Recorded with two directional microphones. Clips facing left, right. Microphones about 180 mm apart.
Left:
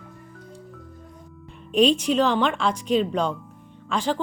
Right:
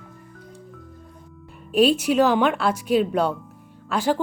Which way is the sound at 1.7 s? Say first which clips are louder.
Right 1 dB; 5° right (ahead or behind).